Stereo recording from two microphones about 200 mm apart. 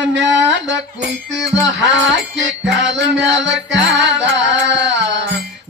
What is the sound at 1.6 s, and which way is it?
Music, 65° right (ahead or behind).